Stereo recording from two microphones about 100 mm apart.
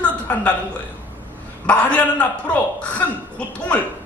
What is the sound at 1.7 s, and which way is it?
A man's voice, 15° left (ahead or behind).